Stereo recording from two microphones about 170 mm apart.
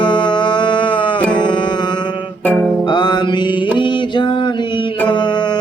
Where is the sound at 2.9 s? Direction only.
25° left (ahead or behind).